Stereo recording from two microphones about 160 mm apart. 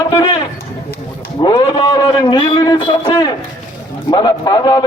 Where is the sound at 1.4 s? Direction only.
25° left (ahead or behind).